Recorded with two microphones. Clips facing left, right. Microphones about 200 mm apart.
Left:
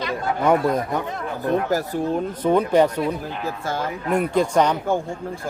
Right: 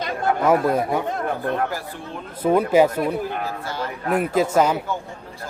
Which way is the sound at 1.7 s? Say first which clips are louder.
Left 10 dB; 40° left (ahead or behind).